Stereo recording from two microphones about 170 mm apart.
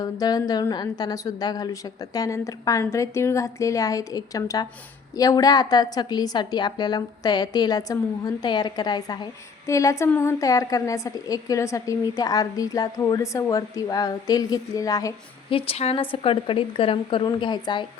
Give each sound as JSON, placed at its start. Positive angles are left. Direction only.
{"t": 0.0, "sound": "a woman's voice", "side_deg": 20}
{"t": 15.5, "sound": "speech", "side_deg": 35}